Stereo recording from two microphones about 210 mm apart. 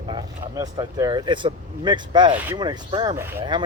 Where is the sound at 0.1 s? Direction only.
15° right (ahead or behind).